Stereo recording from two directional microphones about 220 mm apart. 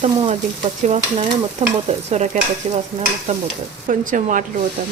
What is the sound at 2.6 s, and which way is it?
Stir, 25° right (ahead or behind).